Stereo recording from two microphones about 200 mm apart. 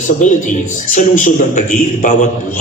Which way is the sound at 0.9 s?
40° left (ahead or behind).